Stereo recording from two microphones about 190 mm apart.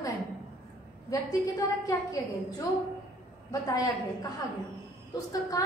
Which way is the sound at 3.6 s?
20° left (ahead or behind).